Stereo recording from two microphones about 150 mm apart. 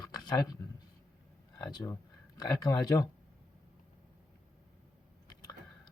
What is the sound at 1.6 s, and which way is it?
A man's voice, 25° left (ahead or behind).